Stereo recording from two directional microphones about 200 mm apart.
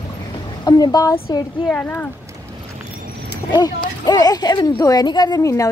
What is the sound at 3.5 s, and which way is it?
Speech, 20° left (ahead or behind).